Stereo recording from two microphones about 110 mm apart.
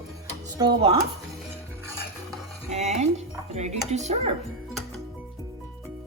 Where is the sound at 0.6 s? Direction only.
40° right (ahead or behind).